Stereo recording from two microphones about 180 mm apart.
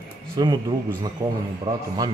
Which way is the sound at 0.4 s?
25° right (ahead or behind).